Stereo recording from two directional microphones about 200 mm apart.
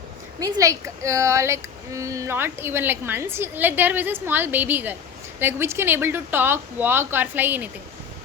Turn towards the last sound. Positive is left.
turn(degrees=-10)  # may be behind; listen again after turning